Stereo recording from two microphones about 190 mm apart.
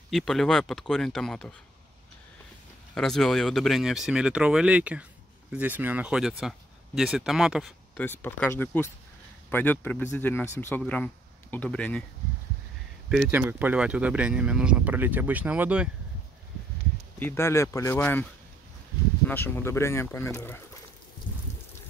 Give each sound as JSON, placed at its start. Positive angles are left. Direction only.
{"t": 0.1, "sound": "speech", "side_deg": 0}
{"t": 2.9, "sound": "speech", "side_deg": 0}
{"t": 8.0, "sound": "speech", "side_deg": 10}
{"t": 13.1, "sound": "speech", "side_deg": -5}
{"t": 17.2, "sound": "speech", "side_deg": 10}
{"t": 19.2, "sound": "speech", "side_deg": 10}